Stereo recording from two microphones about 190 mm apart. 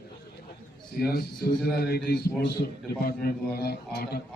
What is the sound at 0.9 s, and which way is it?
A man's voice, 50° left (ahead or behind).